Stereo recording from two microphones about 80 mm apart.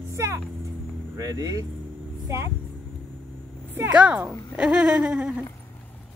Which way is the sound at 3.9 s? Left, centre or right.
Centre.